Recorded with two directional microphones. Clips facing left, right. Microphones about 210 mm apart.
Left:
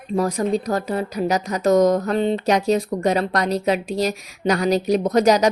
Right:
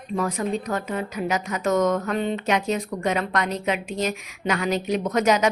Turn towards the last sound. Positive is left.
turn(degrees=35)  # may be behind; listen again after turning